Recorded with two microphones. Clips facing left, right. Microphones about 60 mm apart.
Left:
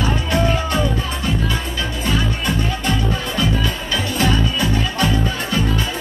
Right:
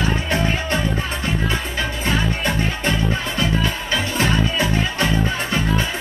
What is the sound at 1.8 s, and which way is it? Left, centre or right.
Music, right.